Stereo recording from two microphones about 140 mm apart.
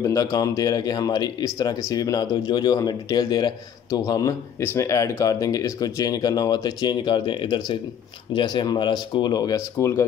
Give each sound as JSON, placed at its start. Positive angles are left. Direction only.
{"t": 0.0, "sound": "speech", "side_deg": 25}